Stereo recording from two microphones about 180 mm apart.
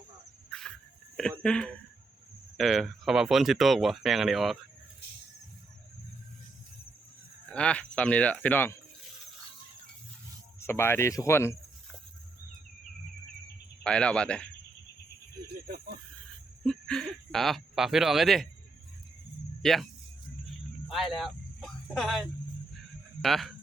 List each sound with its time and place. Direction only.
0.5 s cricket: 5° left (ahead or behind)
1.4 s speech: 5° left (ahead or behind)
7.5 s speech: 5° left (ahead or behind)
10.6 s speech: 15° left (ahead or behind)
13.8 s speech: 5° left (ahead or behind)
15.6 s speech: 60° right (ahead or behind)
16.6 s speech: 5° left (ahead or behind)
19.6 s speech: centre (ahead or behind)
20.9 s speech: centre (ahead or behind)